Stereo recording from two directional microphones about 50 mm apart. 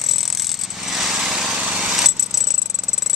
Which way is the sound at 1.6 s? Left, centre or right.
Right.